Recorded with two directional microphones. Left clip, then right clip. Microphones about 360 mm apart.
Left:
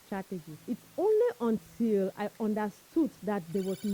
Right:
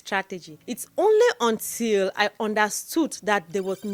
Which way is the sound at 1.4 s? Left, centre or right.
Centre.